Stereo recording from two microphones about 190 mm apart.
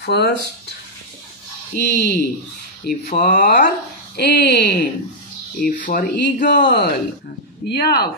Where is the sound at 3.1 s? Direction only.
40° left (ahead or behind).